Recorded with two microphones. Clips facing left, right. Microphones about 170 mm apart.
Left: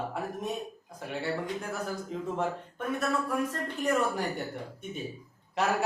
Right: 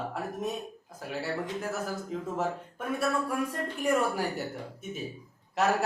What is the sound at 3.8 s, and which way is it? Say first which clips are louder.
Speech: right 1 dB; 10° right (ahead or behind).